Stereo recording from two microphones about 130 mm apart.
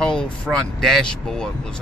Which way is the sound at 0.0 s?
5° left (ahead or behind).